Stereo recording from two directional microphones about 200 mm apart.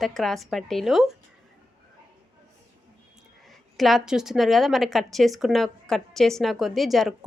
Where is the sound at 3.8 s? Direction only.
Centre (ahead or behind).